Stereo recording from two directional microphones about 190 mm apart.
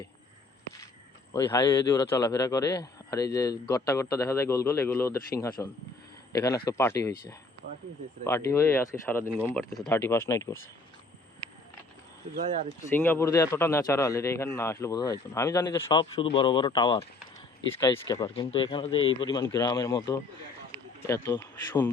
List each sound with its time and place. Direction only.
1.3 s a man's voice: 20° left (ahead or behind)
12.9 s a man's voice: 10° left (ahead or behind)